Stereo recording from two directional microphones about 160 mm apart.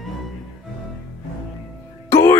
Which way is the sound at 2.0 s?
15° left (ahead or behind).